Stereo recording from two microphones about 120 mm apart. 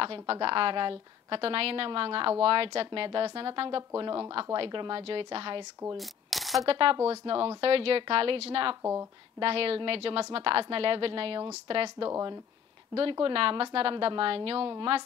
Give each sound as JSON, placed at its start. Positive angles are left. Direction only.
{"t": 0.0, "sound": "a woman's voice", "side_deg": -50}
{"t": 5.9, "sound": "a sound", "side_deg": 0}
{"t": 6.7, "sound": "a woman's voice", "side_deg": -50}
{"t": 12.1, "sound": "speech", "side_deg": -30}
{"t": 13.1, "sound": "a woman's voice", "side_deg": -50}